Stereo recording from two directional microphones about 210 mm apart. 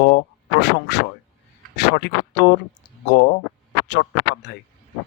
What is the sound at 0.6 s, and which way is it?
Speech, 55° left (ahead or behind).